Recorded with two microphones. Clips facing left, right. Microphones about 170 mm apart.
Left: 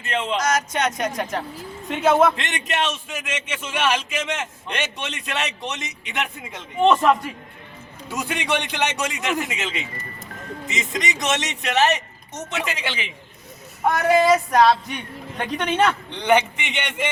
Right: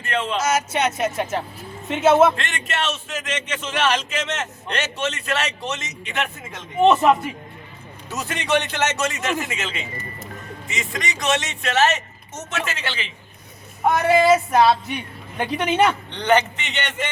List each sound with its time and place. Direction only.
0.0 s a man's voice: 20° left (ahead or behind)
0.3 s speech: 5° right (ahead or behind)
1.9 s music: 5° right (ahead or behind)
2.3 s speech: 20° left (ahead or behind)
6.7 s music: 5° right (ahead or behind)
8.1 s a man's voice: 10° left (ahead or behind)
13.8 s music: centre (ahead or behind)
15.4 s speech: 10° right (ahead or behind)
16.1 s speech: 10° left (ahead or behind)